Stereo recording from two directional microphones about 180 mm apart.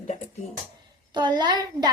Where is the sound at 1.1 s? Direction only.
25° right (ahead or behind).